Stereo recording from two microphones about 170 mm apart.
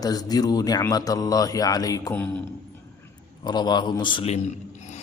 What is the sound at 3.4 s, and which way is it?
A man's voice, 25° left (ahead or behind).